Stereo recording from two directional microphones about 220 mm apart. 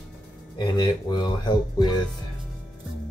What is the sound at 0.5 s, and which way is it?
Speech, 20° left (ahead or behind).